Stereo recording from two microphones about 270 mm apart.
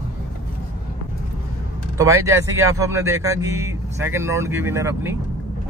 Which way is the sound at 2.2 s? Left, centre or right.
Centre.